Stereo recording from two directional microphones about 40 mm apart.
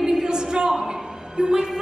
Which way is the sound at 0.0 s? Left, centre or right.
Centre.